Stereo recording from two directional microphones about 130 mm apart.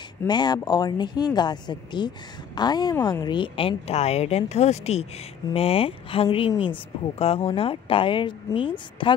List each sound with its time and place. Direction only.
0.3 s speech: 35° left (ahead or behind)